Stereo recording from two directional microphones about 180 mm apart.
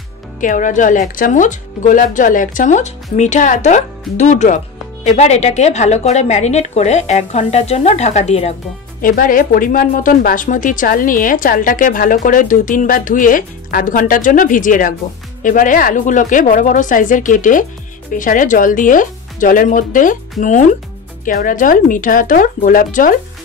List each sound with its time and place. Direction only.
0.4 s a woman's voice: 45° left (ahead or behind)
9.0 s speech: 50° left (ahead or behind)